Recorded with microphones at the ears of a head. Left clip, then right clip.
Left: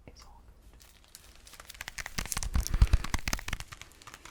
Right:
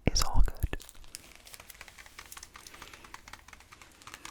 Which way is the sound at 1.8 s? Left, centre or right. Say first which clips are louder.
Left 14 dB; left.